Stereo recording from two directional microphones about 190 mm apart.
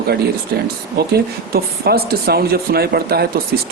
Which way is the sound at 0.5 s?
55° right (ahead or behind).